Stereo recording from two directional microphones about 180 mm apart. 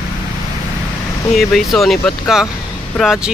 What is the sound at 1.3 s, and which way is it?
Speech, centre (ahead or behind).